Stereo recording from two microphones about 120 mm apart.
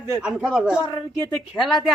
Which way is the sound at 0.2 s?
5° right (ahead or behind).